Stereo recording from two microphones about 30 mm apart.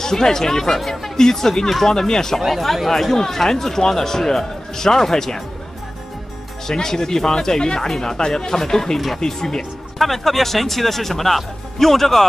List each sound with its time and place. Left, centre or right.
0.0 s speech: centre
0.7 s speech: centre
1.1 s speech: centre
2.4 s speech: centre
6.7 s speech: centre
9.9 s speech: centre